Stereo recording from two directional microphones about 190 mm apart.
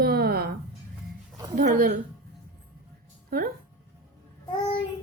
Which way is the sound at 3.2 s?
50° right (ahead or behind).